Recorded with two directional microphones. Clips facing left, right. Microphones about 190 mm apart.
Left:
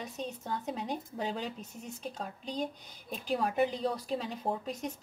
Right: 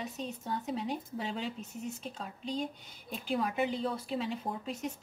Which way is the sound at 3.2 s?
40° left (ahead or behind).